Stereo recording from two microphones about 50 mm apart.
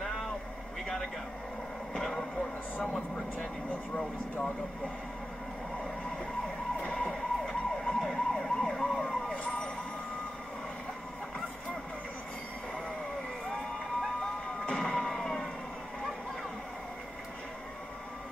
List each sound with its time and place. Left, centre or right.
2.0 s a sound: centre
3.9 s speech: centre
6.8 s emergency vehicle: left
7.1 s emergency vehicle: centre
9.3 s fire engine: left
14.7 s emergency vehicle: centre